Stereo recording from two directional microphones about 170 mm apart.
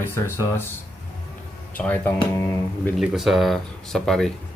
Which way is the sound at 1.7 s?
10° left (ahead or behind).